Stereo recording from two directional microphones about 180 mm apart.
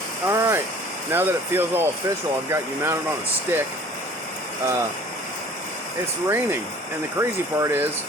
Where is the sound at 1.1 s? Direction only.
10° right (ahead or behind).